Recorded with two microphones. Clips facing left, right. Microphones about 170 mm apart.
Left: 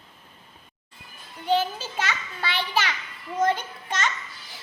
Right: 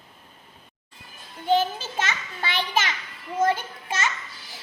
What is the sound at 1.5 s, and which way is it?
A child's voice, 15° right (ahead or behind).